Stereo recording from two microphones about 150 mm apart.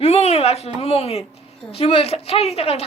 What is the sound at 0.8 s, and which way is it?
Speech, 45° left (ahead or behind).